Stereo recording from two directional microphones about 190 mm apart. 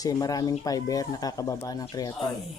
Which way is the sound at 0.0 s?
20° left (ahead or behind).